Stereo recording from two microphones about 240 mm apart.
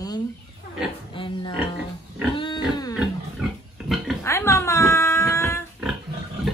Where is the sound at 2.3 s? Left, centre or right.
Left.